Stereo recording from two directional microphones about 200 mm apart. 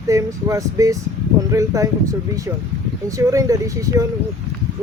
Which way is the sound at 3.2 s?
15° right (ahead or behind).